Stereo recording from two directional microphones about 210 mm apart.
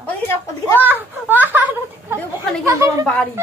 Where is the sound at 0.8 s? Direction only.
10° right (ahead or behind).